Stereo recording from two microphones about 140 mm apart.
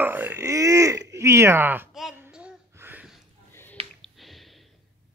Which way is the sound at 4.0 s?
Centre (ahead or behind).